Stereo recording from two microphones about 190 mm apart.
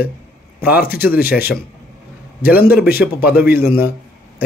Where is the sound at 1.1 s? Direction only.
55° left (ahead or behind).